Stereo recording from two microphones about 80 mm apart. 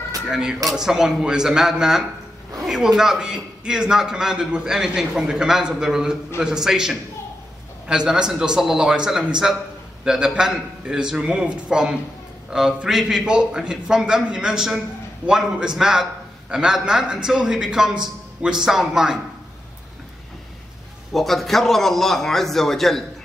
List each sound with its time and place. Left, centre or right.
0.3 s a man's voice: centre
21.1 s a man's voice: centre